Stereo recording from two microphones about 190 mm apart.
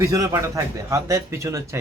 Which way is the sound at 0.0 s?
15° right (ahead or behind).